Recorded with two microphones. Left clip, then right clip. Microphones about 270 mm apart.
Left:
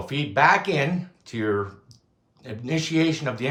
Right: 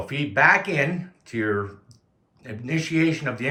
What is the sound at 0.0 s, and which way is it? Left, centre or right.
Speech, centre.